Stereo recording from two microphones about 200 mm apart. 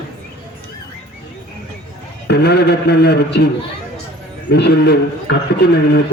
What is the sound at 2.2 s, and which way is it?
A man's voice, 55° left (ahead or behind).